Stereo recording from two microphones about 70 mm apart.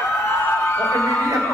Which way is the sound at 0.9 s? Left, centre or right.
Left.